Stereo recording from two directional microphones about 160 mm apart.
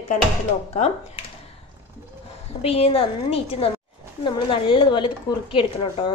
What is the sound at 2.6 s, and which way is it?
A woman's voice, 40° left (ahead or behind).